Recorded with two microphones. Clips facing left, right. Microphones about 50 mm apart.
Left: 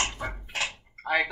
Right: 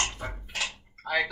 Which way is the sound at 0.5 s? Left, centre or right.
Left.